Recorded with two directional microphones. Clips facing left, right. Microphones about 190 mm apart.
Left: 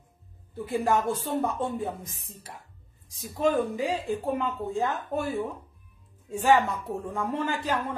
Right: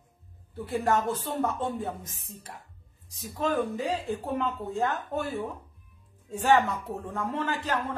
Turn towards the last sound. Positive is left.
turn(degrees=10)  # may be behind; listen again after turning